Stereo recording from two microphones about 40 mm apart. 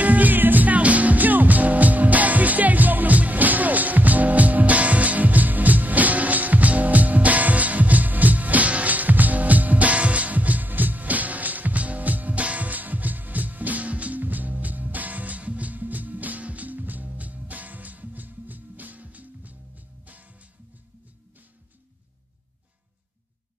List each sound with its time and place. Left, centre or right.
0.0 s music: right